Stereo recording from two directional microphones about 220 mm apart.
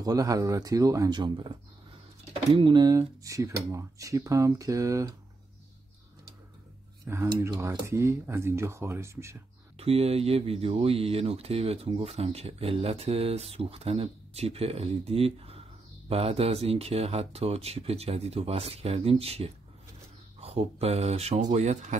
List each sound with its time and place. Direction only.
0.0 s speech: 15° right (ahead or behind)
2.5 s speech: 20° right (ahead or behind)
7.1 s speech: 15° right (ahead or behind)
9.8 s speech: 25° right (ahead or behind)